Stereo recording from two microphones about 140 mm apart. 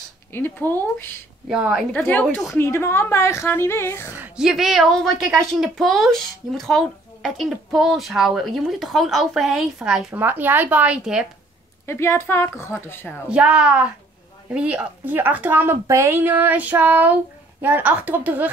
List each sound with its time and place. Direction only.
0.3 s speech: 15° left (ahead or behind)
1.5 s speech: 5° right (ahead or behind)
1.9 s a woman's voice: 10° left (ahead or behind)
4.1 s speech: 10° right (ahead or behind)
11.8 s a woman's voice: 20° left (ahead or behind)
13.3 s a woman's voice: 5° right (ahead or behind)